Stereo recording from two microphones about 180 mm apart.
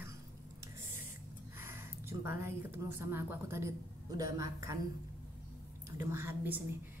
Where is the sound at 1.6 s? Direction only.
15° right (ahead or behind).